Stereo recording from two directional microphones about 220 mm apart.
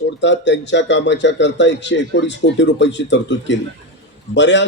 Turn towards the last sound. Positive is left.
turn(degrees=55)  # may be behind; listen again after turning